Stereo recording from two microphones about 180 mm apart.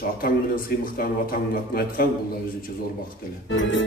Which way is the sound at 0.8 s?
55° left (ahead or behind).